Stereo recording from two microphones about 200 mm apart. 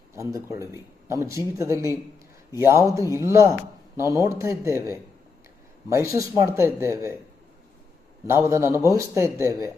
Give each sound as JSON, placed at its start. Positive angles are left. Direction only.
{"t": 0.1, "sound": "speech", "side_deg": -15}
{"t": 8.3, "sound": "speech", "side_deg": -15}